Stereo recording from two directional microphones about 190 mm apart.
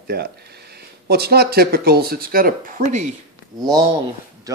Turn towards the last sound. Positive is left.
turn(degrees=-20)  # may be behind; listen again after turning